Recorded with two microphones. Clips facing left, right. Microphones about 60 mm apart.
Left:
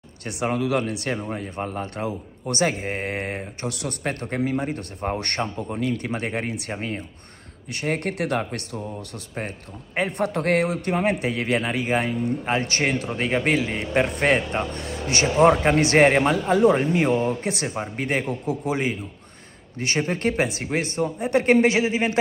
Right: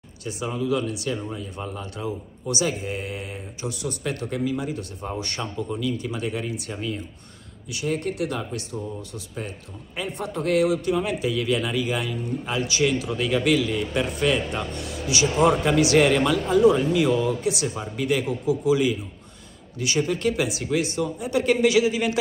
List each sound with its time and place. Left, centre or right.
0.2 s a man's voice: left
4.0 s a man's voice: left